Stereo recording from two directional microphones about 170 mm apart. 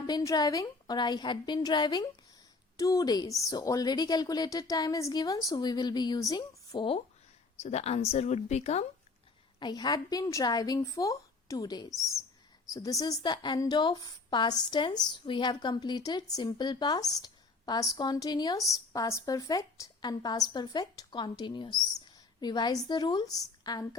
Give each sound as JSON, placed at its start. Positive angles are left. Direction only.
{"t": 0.1, "sound": "a woman's voice", "side_deg": 20}
{"t": 7.6, "sound": "speech", "side_deg": 40}
{"t": 9.6, "sound": "a woman's voice", "side_deg": 25}
{"t": 11.9, "sound": "speech", "side_deg": 0}
{"t": 12.6, "sound": "a woman's voice", "side_deg": 20}